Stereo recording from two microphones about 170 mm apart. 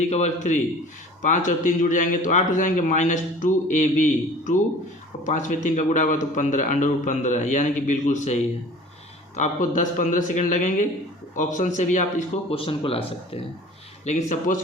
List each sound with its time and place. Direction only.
0.1 s a man's voice: 40° left (ahead or behind)
12.5 s speech: 35° left (ahead or behind)
14.0 s a man's voice: 45° left (ahead or behind)